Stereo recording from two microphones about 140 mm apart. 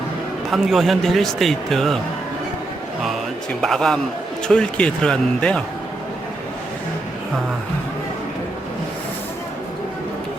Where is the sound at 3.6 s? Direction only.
Centre (ahead or behind).